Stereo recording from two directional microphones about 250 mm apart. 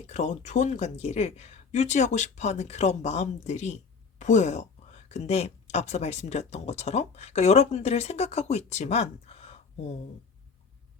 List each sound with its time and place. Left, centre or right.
0.0 s speech: left